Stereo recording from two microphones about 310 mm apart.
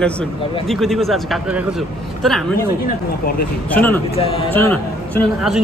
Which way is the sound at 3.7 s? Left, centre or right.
Centre.